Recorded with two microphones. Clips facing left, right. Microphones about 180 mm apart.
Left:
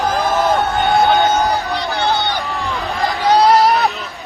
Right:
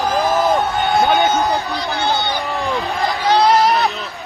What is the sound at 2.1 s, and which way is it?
Run, 15° right (ahead or behind).